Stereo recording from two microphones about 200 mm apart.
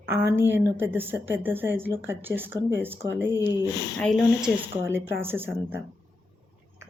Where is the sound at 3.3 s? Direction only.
20° left (ahead or behind).